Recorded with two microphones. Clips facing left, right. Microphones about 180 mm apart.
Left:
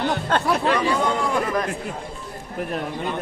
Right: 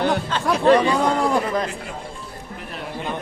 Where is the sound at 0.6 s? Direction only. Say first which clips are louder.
Right 5 dB; 35° right (ahead or behind).